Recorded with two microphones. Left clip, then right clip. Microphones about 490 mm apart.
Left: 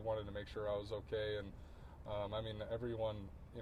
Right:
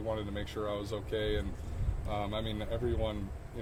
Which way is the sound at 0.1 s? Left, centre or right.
Left.